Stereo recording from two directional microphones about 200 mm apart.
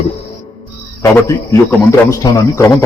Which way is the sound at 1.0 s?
15° left (ahead or behind).